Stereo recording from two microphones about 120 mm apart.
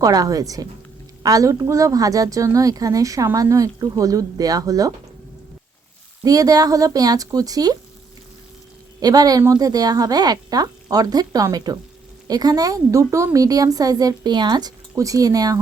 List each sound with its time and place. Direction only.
0.0 s a woman's voice: 30° right (ahead or behind)
6.2 s a woman's voice: 30° right (ahead or behind)
9.0 s a woman's voice: 30° right (ahead or behind)